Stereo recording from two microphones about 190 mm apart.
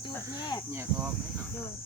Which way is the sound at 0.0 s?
20° left (ahead or behind).